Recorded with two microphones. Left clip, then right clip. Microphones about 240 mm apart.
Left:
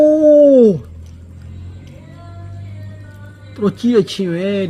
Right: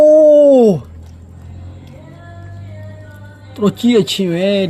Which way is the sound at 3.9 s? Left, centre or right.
Centre.